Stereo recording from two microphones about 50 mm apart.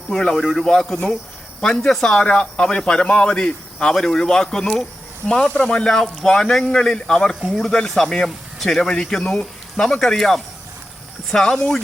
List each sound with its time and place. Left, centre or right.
0.2 s a man's voice: centre